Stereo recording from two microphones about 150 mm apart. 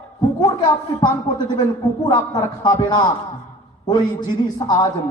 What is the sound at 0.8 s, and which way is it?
A man's voice, 35° left (ahead or behind).